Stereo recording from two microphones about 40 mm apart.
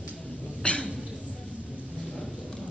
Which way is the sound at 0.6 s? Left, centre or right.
Left.